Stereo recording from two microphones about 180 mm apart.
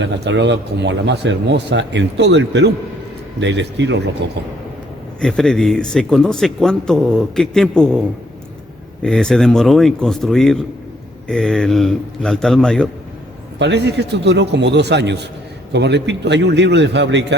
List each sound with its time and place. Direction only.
0.0 s speech: 80° right
5.2 s speech: centre (ahead or behind)
13.6 s speech: 70° right (ahead or behind)